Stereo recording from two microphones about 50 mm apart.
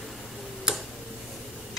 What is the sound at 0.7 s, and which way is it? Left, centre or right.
Tick-tock, centre.